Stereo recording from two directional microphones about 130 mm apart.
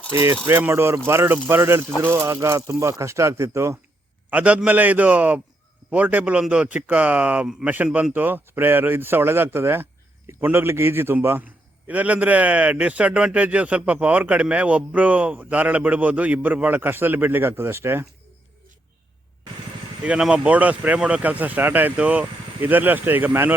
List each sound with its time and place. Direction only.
0.1 s speech: 20° right (ahead or behind)
4.3 s a man's voice: 10° right (ahead or behind)
20.1 s a man's voice: 5° right (ahead or behind)